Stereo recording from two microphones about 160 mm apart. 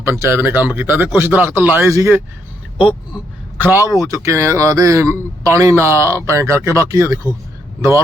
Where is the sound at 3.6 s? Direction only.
15° right (ahead or behind).